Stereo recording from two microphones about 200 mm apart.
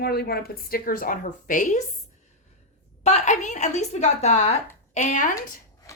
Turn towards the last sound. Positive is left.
turn(degrees=40)  # may be behind; listen again after turning